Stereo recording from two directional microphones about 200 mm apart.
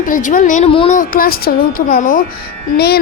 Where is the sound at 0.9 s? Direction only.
45° left (ahead or behind).